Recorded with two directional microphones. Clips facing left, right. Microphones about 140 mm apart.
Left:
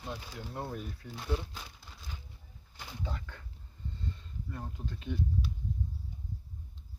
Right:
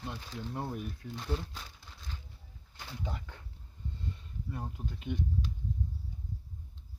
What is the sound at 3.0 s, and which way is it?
Speech, 15° right (ahead or behind).